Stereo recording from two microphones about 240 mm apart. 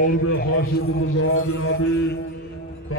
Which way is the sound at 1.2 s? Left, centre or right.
Left.